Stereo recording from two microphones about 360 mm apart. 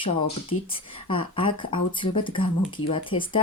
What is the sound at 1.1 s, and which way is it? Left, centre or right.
Speech, centre.